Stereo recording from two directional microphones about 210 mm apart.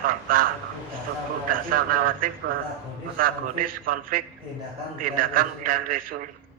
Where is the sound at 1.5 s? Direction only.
45° right (ahead or behind).